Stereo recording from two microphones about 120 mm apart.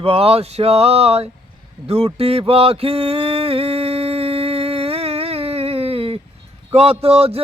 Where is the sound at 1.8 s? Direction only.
55° right (ahead or behind).